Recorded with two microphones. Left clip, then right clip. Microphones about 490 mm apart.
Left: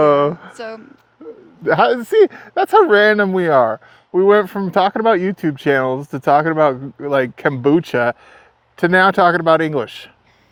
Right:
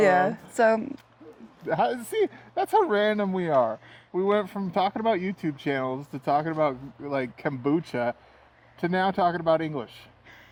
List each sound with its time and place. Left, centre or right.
1.6 s speech: left